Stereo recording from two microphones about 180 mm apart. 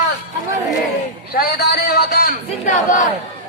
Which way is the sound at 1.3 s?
60° left (ahead or behind).